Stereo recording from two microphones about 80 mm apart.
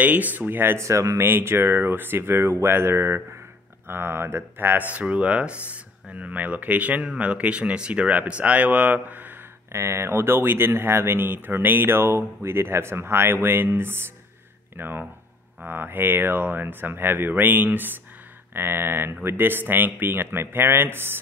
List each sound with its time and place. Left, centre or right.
0.0 s speech: right
0.8 s speech: right
1.2 s speech: right
4.9 s speech: centre
9.7 s speech: right